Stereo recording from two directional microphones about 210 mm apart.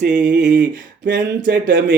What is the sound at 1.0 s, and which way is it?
Speech, 45° right (ahead or behind).